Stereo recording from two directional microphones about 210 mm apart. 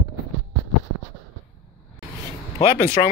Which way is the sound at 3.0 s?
30° left (ahead or behind).